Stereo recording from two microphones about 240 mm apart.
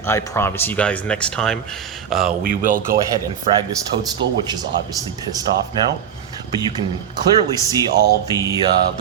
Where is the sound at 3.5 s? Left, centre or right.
Right.